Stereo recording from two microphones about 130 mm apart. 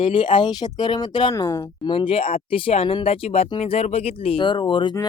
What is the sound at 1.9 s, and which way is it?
Speech, 45° left (ahead or behind).